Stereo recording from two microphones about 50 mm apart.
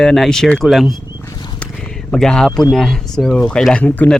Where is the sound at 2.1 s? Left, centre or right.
Centre.